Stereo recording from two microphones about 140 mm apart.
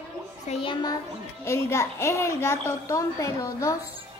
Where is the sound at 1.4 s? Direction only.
20° left (ahead or behind).